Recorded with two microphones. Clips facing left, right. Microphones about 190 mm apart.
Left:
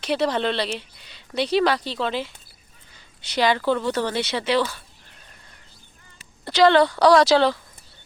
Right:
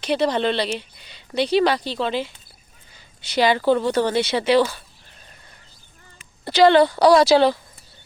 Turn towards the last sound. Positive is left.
turn(degrees=-10)  # may be behind; listen again after turning